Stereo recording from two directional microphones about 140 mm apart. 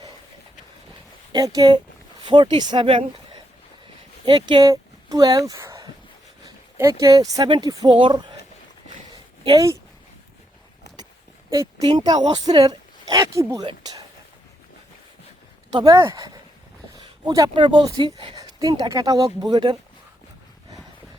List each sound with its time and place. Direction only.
1.3 s speech: 25° right (ahead or behind)
4.3 s speech: 30° right (ahead or behind)
4.7 s a sound: 25° right (ahead or behind)
6.4 s speech: 25° right (ahead or behind)
9.4 s speech: 35° right (ahead or behind)
11.8 s speech: 35° right (ahead or behind)
13.7 s a sound: 30° right (ahead or behind)
15.7 s speech: 25° right (ahead or behind)
18.3 s speech: 25° right (ahead or behind)